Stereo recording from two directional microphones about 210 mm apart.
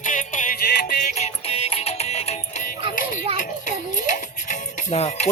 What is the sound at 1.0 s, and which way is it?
Music, 30° left (ahead or behind).